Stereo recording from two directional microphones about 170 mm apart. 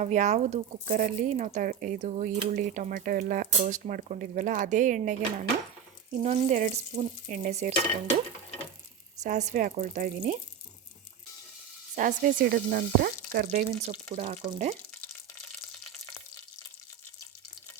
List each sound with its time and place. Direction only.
0.0 s speech: 45° right (ahead or behind)
9.2 s speech: 45° right (ahead or behind)
11.9 s frying: 55° right (ahead or behind)
14.2 s speech: 45° right (ahead or behind)